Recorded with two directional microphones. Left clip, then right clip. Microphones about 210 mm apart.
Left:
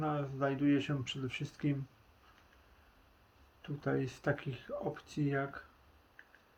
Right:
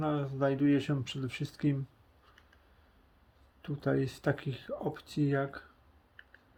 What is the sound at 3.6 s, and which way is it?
Speech, 50° right (ahead or behind).